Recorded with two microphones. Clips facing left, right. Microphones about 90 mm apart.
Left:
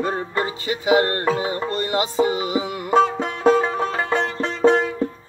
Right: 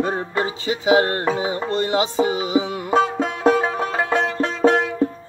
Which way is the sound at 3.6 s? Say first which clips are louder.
Right 1 dB; 10° right (ahead or behind).